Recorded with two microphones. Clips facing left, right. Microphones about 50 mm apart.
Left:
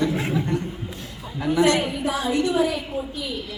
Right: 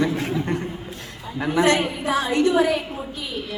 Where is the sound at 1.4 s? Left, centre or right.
Right.